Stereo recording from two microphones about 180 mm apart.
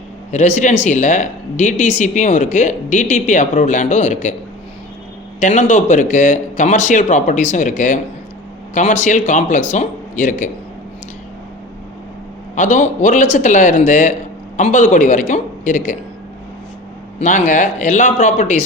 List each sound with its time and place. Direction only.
0.3 s speech: 40° left (ahead or behind)
5.4 s speech: 40° left (ahead or behind)
12.5 s speech: 45° left (ahead or behind)
17.2 s speech: 45° left (ahead or behind)